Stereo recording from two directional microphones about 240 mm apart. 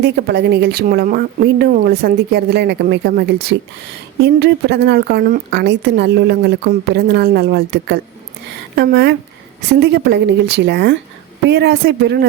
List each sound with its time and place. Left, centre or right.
0.0 s a woman's voice: right